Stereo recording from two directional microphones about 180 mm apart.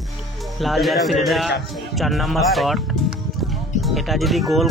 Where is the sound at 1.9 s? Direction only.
Centre (ahead or behind).